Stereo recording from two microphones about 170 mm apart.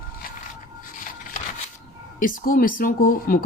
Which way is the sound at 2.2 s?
55° left (ahead or behind).